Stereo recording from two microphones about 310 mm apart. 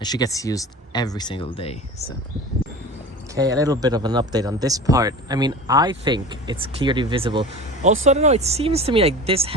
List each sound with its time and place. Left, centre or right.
0.0 s speech: centre
3.3 s speech: centre